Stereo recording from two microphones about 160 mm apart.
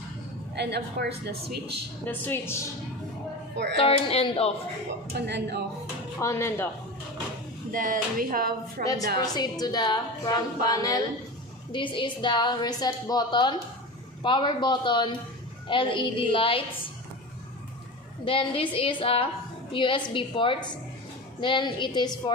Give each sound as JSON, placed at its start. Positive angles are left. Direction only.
{"t": 0.6, "sound": "a woman's voice", "side_deg": -90}
{"t": 2.0, "sound": "a woman's voice", "side_deg": 15}
{"t": 3.7, "sound": "a woman's voice", "side_deg": 35}
{"t": 5.2, "sound": "a woman's voice", "side_deg": -90}
{"t": 6.1, "sound": "a woman's voice", "side_deg": 15}
{"t": 7.7, "sound": "music", "side_deg": -60}
{"t": 9.2, "sound": "a woman's voice", "side_deg": 25}
{"t": 18.2, "sound": "a woman's voice", "side_deg": 35}